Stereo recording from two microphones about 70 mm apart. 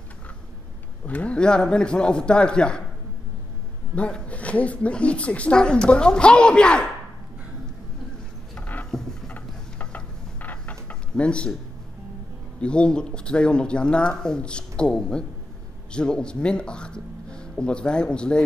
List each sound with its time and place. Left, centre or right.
1.0 s a woman's voice: centre
3.9 s a woman's voice: centre
8.5 s a sound: left
12.5 s a woman's voice: centre